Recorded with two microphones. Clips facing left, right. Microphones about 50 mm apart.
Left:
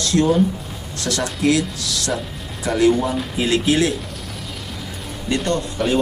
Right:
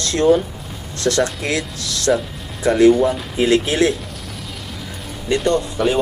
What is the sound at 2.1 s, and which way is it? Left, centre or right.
Speech, centre.